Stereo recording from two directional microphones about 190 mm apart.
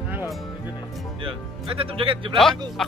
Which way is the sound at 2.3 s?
Centre (ahead or behind).